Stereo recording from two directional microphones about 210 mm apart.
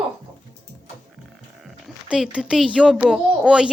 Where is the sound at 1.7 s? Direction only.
Centre (ahead or behind).